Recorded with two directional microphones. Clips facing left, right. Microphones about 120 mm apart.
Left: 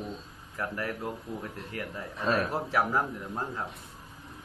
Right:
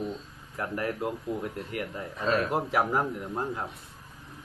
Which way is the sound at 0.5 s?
20° right (ahead or behind).